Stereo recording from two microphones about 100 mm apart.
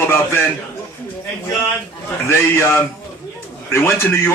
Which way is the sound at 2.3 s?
20° left (ahead or behind).